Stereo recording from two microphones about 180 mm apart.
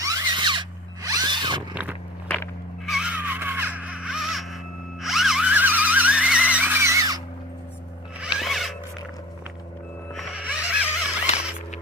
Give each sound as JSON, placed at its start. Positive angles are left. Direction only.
{"t": 0.0, "sound": "drill", "side_deg": -20}
{"t": 1.7, "sound": "biting", "side_deg": -10}
{"t": 2.2, "sound": "walk", "side_deg": 10}
{"t": 2.8, "sound": "a sound", "side_deg": -5}
{"t": 8.4, "sound": "zipper", "side_deg": 0}
{"t": 10.2, "sound": "music", "side_deg": -5}